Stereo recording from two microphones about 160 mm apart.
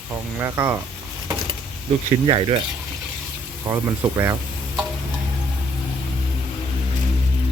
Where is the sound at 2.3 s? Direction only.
30° right (ahead or behind).